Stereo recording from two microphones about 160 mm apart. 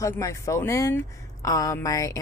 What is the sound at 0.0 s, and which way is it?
Speech, 20° left (ahead or behind).